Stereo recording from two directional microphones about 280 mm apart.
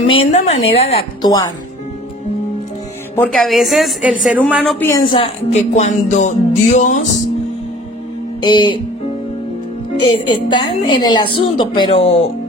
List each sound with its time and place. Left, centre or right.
0.0 s a woman's voice: left
3.2 s a woman's voice: centre; by 7.1 s left
8.4 s a woman's voice: centre
10.1 s a woman's voice: centre